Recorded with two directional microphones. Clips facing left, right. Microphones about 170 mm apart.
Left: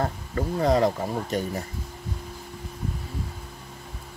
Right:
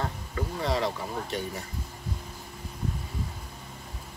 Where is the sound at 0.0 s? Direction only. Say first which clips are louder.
Left 5 dB; 45° left (ahead or behind).